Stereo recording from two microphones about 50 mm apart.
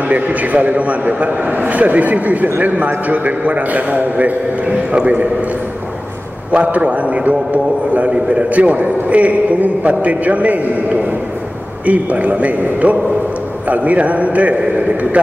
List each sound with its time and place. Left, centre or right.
0.1 s a man's voice: right
6.5 s a man's voice: right
11.8 s a man's voice: right